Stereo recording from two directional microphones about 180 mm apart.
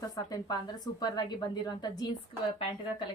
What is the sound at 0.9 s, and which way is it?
Speech, 25° left (ahead or behind).